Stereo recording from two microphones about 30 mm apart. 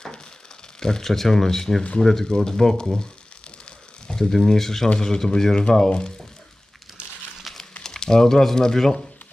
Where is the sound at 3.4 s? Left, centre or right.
Left.